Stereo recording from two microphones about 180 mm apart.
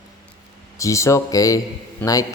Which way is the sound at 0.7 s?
15° left (ahead or behind).